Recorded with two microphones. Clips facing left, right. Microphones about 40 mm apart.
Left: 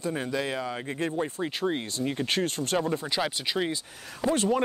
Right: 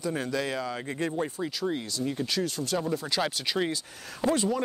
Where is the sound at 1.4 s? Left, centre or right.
Left.